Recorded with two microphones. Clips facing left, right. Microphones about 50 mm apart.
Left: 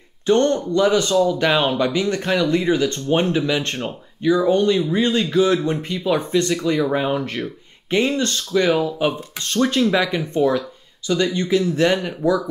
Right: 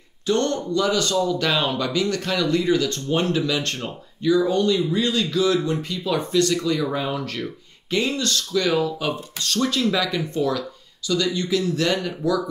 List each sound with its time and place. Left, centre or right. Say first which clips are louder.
0.3 s speech: left 5 dB; left